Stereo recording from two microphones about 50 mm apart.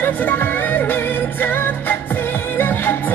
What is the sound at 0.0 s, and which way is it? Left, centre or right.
Music, left.